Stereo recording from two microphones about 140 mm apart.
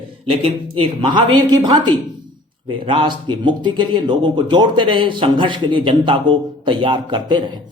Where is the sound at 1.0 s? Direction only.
35° right (ahead or behind).